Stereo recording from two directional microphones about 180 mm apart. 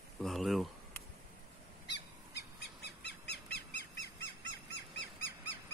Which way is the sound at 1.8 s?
70° left (ahead or behind).